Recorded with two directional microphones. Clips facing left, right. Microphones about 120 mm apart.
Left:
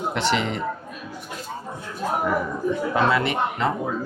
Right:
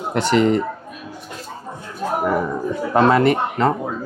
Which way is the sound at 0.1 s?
45° right (ahead or behind).